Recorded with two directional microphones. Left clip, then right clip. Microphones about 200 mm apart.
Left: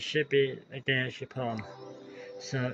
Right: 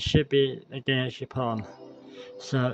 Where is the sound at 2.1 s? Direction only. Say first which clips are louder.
Right 6 dB; 25° right (ahead or behind).